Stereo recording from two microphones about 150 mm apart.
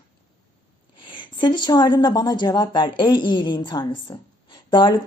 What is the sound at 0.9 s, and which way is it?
Speech, 35° left (ahead or behind).